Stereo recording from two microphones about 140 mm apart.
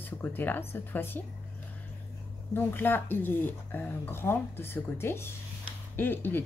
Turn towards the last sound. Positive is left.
turn(degrees=15)  # may be behind; listen again after turning